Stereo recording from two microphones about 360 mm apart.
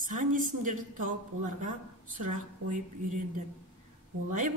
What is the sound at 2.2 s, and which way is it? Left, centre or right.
A man's voice, right.